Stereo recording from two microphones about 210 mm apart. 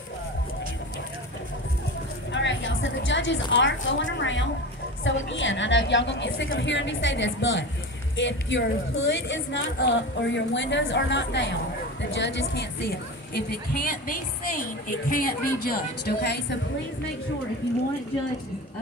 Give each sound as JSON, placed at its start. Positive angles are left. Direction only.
{"t": 2.3, "sound": "a woman's voice", "side_deg": 60}
{"t": 13.3, "sound": "a woman's voice", "side_deg": 45}